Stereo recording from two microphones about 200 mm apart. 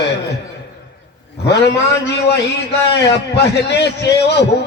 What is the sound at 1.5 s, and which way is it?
A man's voice, 55° left (ahead or behind).